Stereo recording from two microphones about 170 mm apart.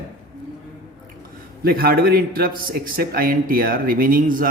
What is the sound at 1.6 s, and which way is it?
A man's voice, 60° right (ahead or behind).